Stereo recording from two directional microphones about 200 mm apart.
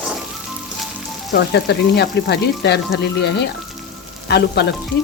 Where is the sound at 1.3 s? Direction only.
55° left (ahead or behind).